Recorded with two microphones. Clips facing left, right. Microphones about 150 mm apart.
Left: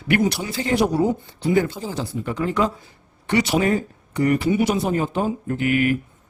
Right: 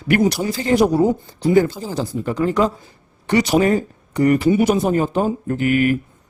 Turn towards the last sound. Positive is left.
turn(degrees=-40)  # may be behind; listen again after turning